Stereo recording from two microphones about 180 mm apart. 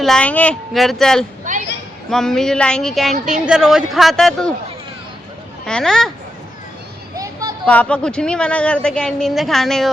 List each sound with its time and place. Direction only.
0.0 s speech: 5° left (ahead or behind)
3.1 s a woman's voice: 40° right (ahead or behind)
3.4 s speech: 5° right (ahead or behind)
5.6 s speech: 5° left (ahead or behind)
7.2 s a sound: 20° right (ahead or behind)
7.6 s speech: 5° left (ahead or behind)